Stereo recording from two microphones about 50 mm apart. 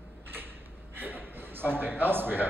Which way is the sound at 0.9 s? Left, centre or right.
Right.